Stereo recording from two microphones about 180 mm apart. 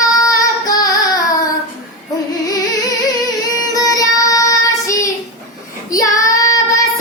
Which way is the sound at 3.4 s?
20° left (ahead or behind).